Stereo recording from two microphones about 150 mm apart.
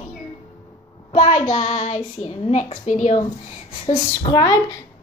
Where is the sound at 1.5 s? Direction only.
55° left (ahead or behind).